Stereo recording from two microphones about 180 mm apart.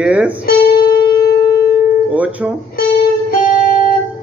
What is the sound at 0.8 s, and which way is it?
Music, 25° left (ahead or behind).